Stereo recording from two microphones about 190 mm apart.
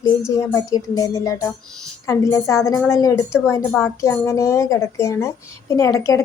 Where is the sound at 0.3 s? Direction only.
15° left (ahead or behind).